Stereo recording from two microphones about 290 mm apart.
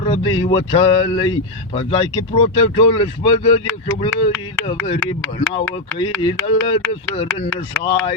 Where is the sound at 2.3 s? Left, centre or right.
Centre.